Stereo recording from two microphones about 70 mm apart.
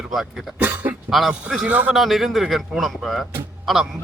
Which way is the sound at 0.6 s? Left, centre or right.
Right.